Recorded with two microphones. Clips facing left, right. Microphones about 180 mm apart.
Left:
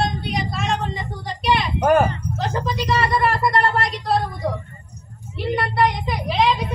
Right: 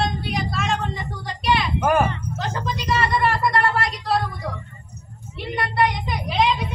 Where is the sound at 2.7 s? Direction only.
Centre (ahead or behind).